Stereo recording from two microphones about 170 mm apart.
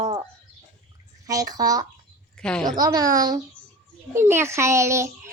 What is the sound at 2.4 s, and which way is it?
Speech, 5° left (ahead or behind).